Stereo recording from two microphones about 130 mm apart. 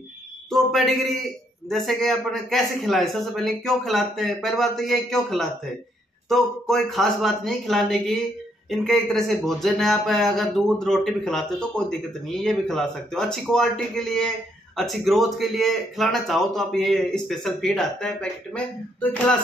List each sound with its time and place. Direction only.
0.5 s a sound: centre (ahead or behind)
1.7 s speech: centre (ahead or behind)
6.2 s speech: centre (ahead or behind)